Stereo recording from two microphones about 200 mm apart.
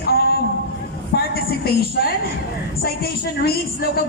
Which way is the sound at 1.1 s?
50° left (ahead or behind).